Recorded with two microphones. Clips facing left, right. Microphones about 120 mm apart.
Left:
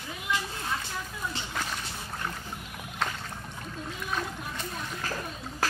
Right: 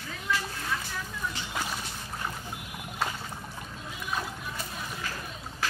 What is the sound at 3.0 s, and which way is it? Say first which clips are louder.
Rowboat: even; 5° right (ahead or behind).